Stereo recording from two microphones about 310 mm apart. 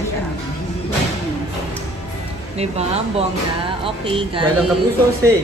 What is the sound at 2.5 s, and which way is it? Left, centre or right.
A man's voice, centre.